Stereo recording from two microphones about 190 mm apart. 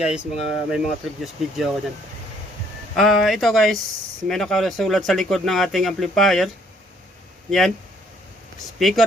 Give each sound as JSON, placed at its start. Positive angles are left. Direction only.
{"t": 0.0, "sound": "speech", "side_deg": -5}
{"t": 2.9, "sound": "speech", "side_deg": 0}
{"t": 8.8, "sound": "speech", "side_deg": 0}